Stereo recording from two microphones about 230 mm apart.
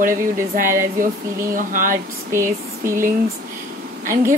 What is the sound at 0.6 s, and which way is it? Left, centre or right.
Speech, right.